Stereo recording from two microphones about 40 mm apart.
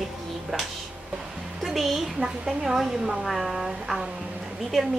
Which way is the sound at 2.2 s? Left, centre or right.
Centre.